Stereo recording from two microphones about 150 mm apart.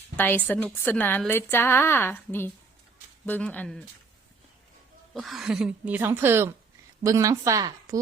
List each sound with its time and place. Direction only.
0.2 s a woman's voice: 10° left (ahead or behind)
5.1 s a woman's voice: centre (ahead or behind); by 7.9 s 20° right (ahead or behind)